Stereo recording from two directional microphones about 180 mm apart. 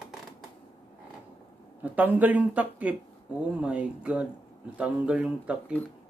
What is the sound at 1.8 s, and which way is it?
Speech, 10° right (ahead or behind).